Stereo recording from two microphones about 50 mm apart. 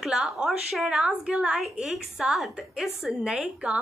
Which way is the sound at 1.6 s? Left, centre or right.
Centre.